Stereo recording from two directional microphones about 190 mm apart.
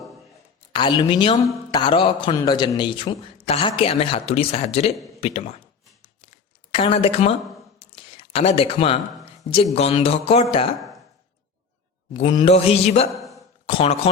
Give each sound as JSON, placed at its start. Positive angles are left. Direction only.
{"t": 0.7, "sound": "a man's voice", "side_deg": 25}
{"t": 6.2, "sound": "a sound", "side_deg": 30}
{"t": 9.7, "sound": "speech", "side_deg": 30}
{"t": 12.1, "sound": "speech", "side_deg": 25}
{"t": 13.1, "sound": "a sound", "side_deg": 0}
{"t": 13.7, "sound": "a man's voice", "side_deg": 30}